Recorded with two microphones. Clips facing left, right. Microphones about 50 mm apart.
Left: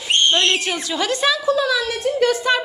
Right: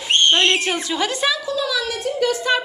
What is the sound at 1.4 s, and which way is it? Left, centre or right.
Speech, left.